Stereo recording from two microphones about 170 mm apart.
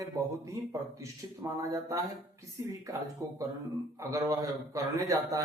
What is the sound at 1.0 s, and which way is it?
A man's voice, 20° right (ahead or behind).